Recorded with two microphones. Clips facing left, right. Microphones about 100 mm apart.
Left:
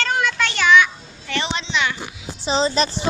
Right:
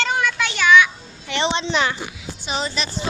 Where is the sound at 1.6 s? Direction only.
40° right (ahead or behind).